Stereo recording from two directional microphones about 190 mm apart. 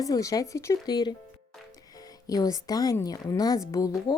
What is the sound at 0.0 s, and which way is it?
A woman's voice, 20° left (ahead or behind).